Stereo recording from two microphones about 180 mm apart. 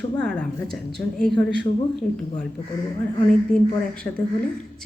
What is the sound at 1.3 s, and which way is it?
Speech, 70° right (ahead or behind).